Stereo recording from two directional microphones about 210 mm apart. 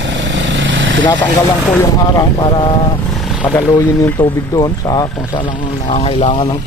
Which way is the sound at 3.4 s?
10° left (ahead or behind).